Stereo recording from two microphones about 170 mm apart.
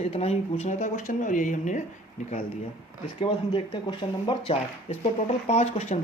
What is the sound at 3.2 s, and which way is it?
Speech, 25° left (ahead or behind).